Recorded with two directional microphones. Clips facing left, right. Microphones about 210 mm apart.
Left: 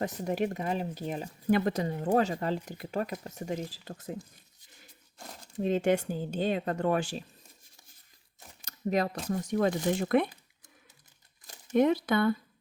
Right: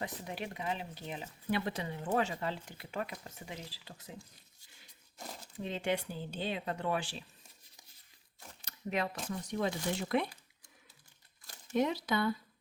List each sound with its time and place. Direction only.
0.0 s speech: 45° left (ahead or behind)
5.5 s speech: 45° left (ahead or behind)
8.6 s speech: 40° left (ahead or behind)
11.7 s speech: 55° left (ahead or behind)